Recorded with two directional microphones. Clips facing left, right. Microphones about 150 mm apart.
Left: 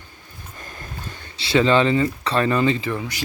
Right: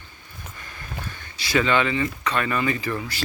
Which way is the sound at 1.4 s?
25° left (ahead or behind).